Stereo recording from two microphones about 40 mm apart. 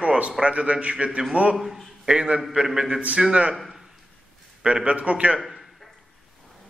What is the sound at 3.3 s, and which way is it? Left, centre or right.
Speech, right.